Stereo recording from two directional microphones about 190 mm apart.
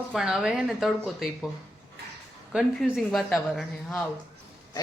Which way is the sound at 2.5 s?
Centre (ahead or behind).